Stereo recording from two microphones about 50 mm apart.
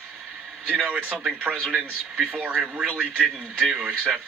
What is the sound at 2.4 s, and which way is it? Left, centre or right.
Speech, centre.